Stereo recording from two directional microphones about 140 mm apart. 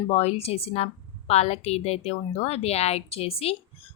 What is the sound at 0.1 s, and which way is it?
A woman's voice, 50° left (ahead or behind).